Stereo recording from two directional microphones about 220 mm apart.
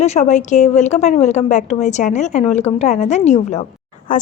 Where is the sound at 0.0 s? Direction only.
30° left (ahead or behind).